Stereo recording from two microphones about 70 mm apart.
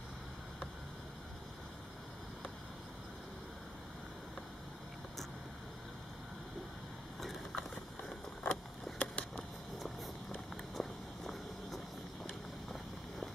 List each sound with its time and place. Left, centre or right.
7.2 s vehicle: centre
8.9 s a sound: centre
10.7 s walk: centre